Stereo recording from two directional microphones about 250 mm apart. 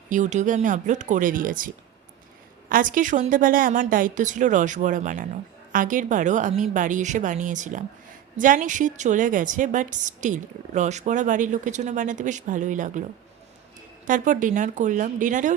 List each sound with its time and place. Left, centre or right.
0.1 s a woman's voice: right
14.1 s a woman's voice: right